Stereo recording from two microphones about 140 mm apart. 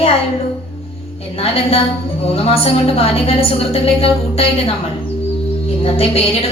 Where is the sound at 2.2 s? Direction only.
45° left (ahead or behind).